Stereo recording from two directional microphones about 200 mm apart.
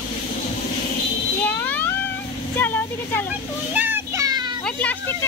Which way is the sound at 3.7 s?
10° right (ahead or behind).